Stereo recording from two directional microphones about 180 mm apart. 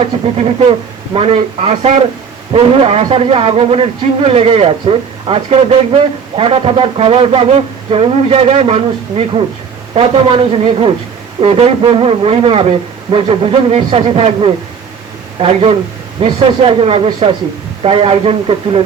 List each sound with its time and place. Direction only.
0.0 s speech: 35° right (ahead or behind)